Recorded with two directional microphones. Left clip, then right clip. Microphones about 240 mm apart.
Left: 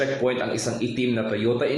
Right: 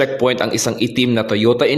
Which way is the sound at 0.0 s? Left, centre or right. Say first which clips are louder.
Right 7 dB; right.